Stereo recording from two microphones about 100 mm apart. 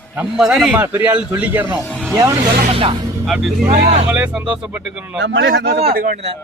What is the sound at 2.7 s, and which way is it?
Speech, 70° right (ahead or behind).